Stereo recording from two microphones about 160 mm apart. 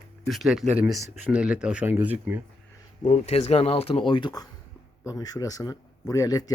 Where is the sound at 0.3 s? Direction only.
Centre (ahead or behind).